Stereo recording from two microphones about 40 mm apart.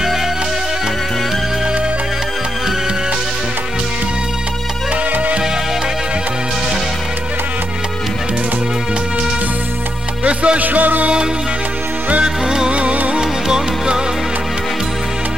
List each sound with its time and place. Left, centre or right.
10.2 s music: right
10.6 s music: right
12.4 s music: right
13.2 s music: centre